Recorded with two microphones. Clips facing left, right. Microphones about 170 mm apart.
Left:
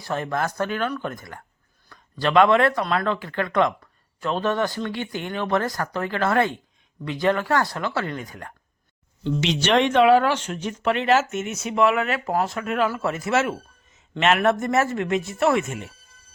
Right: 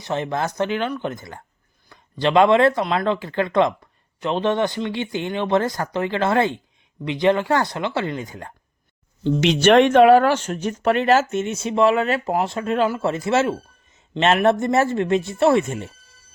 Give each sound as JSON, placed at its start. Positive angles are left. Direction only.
{"t": 0.0, "sound": "speech", "side_deg": -25}
{"t": 9.4, "sound": "speech", "side_deg": -50}